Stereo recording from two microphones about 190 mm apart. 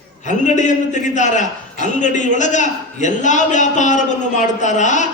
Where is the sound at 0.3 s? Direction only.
40° left (ahead or behind).